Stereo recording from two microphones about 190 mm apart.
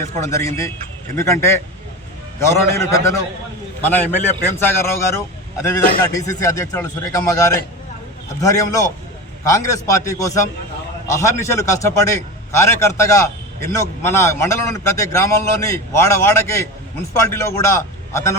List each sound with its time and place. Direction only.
0.0 s a man's voice: 15° left (ahead or behind)